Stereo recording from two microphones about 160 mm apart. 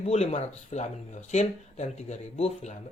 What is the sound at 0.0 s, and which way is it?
Speech, 40° left (ahead or behind).